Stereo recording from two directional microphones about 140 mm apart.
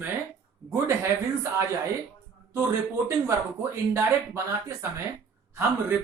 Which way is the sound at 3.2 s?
20° right (ahead or behind).